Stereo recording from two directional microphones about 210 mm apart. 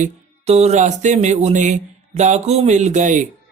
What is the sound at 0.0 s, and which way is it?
Speech, 30° right (ahead or behind).